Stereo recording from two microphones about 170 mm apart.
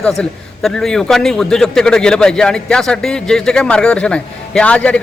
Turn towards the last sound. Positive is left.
turn(degrees=5)  # may be behind; listen again after turning